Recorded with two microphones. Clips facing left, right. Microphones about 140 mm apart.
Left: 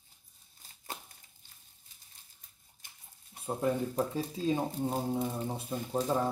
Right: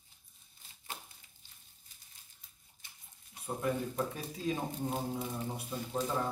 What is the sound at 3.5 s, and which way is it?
Speech, 30° left (ahead or behind).